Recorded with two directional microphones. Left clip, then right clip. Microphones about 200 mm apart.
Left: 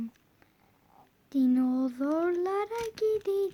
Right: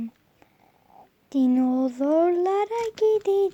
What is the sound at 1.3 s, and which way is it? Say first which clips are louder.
A child's voice: right 5 dB; 5° right (ahead or behind).